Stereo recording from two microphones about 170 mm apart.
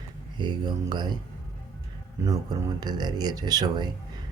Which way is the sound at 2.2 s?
25° right (ahead or behind).